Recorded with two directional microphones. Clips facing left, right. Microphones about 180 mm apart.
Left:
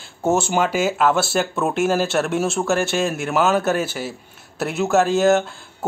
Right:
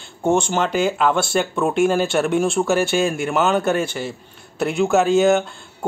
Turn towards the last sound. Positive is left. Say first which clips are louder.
# right 1 dB
turn(degrees=0)  # may be behind; listen again after turning